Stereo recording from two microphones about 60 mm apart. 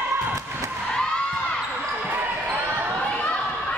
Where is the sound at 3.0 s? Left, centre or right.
Centre.